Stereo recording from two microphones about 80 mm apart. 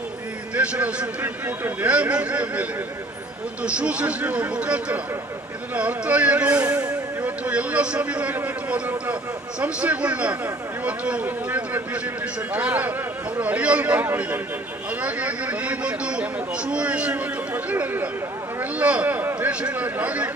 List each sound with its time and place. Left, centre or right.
0.5 s a man's voice: centre
1.2 s speech: right
3.8 s speech: centre
7.2 s a sound: right
9.6 s speech: centre